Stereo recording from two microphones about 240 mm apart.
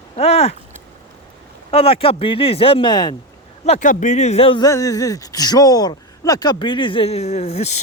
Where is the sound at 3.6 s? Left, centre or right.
Left.